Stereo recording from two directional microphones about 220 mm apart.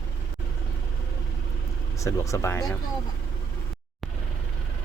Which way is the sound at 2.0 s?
15° left (ahead or behind).